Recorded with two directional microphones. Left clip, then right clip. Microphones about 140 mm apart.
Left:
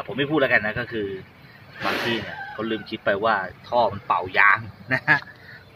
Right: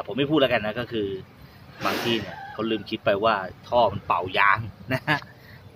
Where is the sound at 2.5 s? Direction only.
20° right (ahead or behind).